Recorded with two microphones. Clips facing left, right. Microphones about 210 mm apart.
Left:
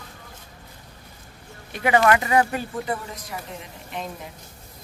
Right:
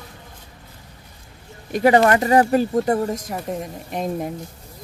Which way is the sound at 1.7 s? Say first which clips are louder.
Right 4 dB; 40° right (ahead or behind).